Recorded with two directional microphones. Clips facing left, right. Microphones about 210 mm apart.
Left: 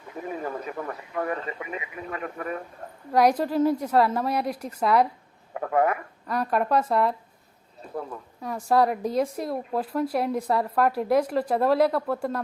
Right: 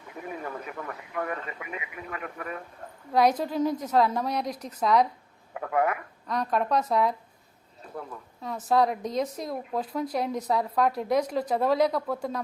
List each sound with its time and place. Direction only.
0.2 s speech: 35° left (ahead or behind)
3.1 s a woman's voice: 10° left (ahead or behind)
5.5 s speech: 35° left (ahead or behind)
6.2 s speech: 5° left (ahead or behind)
8.7 s speech: 5° left (ahead or behind)